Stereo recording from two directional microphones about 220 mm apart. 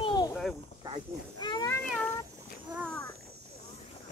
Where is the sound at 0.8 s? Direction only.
20° right (ahead or behind).